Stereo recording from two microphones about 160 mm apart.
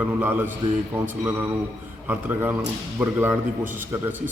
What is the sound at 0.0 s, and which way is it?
A man's voice, 10° right (ahead or behind).